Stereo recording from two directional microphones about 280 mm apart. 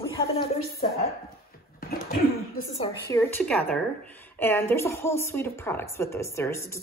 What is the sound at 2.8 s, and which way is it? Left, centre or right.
A woman's voice, centre.